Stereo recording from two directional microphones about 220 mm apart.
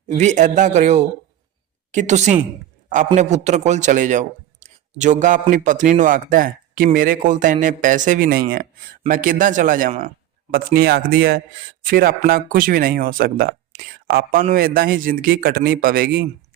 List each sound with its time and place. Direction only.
0.1 s speech: 30° right (ahead or behind)